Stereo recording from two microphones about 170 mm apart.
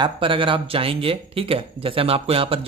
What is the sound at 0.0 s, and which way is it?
Speech, 30° right (ahead or behind).